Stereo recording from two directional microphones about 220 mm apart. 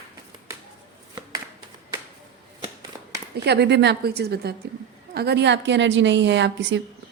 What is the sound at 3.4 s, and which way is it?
A woman's voice, 50° right (ahead or behind).